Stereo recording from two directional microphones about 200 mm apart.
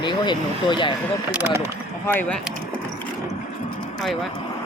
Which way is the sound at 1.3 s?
10° right (ahead or behind).